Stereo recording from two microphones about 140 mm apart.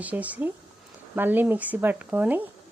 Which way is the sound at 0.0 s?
10° right (ahead or behind).